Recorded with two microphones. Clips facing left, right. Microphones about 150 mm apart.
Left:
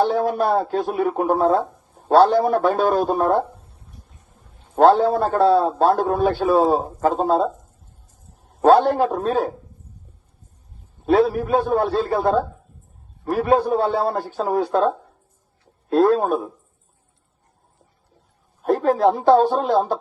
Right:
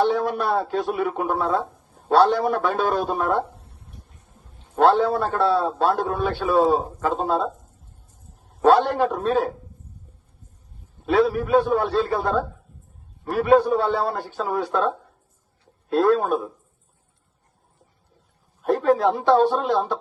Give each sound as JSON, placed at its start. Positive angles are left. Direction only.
{"t": 0.1, "sound": "a sound", "side_deg": 45}
{"t": 0.6, "sound": "a man's voice", "side_deg": 45}
{"t": 4.8, "sound": "a man's voice", "side_deg": 40}
{"t": 8.6, "sound": "a man's voice", "side_deg": 40}
{"t": 11.0, "sound": "a man's voice", "side_deg": 40}
{"t": 18.6, "sound": "a man's voice", "side_deg": 40}